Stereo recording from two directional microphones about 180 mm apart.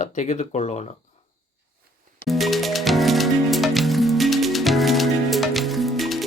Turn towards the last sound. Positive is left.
turn(degrees=0)  # may be behind; listen again after turning